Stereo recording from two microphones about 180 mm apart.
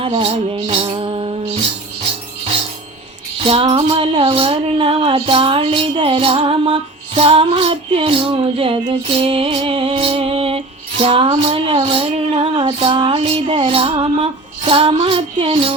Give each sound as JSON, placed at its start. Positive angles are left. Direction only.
{"t": 0.2, "sound": "music", "side_deg": -35}
{"t": 3.4, "sound": "music", "side_deg": -30}